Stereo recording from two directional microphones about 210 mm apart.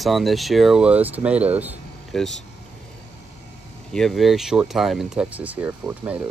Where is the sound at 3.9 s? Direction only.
Centre (ahead or behind).